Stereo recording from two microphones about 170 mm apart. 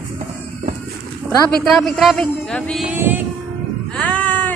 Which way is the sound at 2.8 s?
10° right (ahead or behind).